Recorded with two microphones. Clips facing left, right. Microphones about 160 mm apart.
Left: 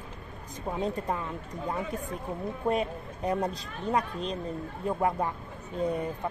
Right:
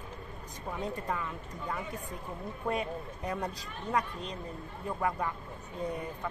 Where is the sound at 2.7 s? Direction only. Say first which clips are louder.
Left 3 dB; 25° left (ahead or behind).